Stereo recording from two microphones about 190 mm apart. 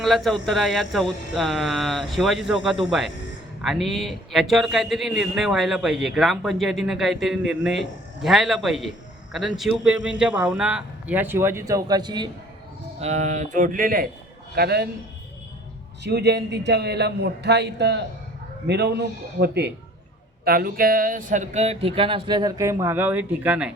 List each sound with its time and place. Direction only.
0.0 s a man's voice: centre (ahead or behind); by 12.3 s 25° right (ahead or behind)
13.0 s a man's voice: 35° right (ahead or behind); by 14.8 s 55° right (ahead or behind)
16.0 s a man's voice: 60° right (ahead or behind); by 23.7 s 5° right (ahead or behind)